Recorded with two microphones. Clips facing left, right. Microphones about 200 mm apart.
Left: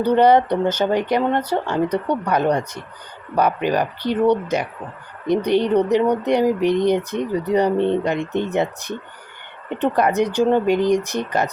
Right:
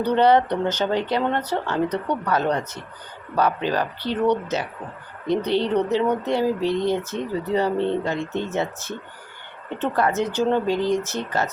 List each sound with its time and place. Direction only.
0.0 s speech: 10° left (ahead or behind)